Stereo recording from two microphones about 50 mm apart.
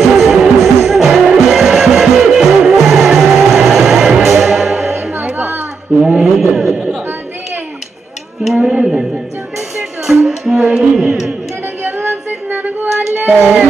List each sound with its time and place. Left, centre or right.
0.0 s music: centre
6.0 s mantra: centre
8.5 s a sound: centre
10.2 s music: centre
11.8 s music: right
12.7 s child singing: right
13.3 s a sound: right